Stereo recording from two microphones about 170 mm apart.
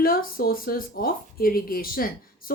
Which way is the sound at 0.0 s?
60° left (ahead or behind).